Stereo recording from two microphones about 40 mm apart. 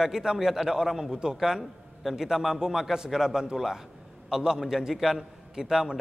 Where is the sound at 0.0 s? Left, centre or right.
Centre.